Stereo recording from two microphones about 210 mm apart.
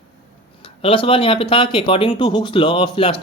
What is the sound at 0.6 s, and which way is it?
Speech, 25° left (ahead or behind).